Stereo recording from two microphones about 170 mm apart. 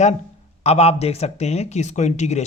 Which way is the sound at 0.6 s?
40° left (ahead or behind).